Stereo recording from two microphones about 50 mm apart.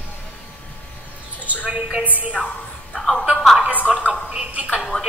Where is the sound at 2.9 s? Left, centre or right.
Centre.